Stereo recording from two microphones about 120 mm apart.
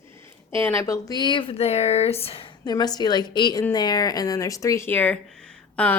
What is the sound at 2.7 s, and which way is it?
A woman's voice, 35° left (ahead or behind).